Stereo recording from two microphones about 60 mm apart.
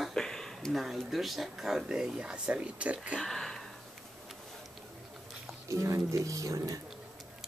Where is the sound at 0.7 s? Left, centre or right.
Centre; by 3.2 s right.